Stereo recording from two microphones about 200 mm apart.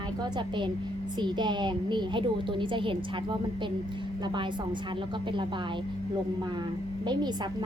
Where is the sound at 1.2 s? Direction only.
20° right (ahead or behind).